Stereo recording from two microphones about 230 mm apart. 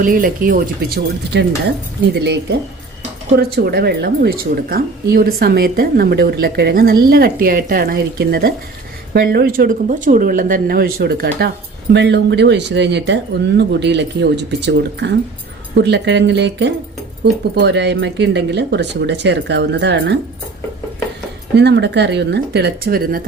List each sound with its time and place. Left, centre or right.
0.0 s speech: right
21.5 s speech: right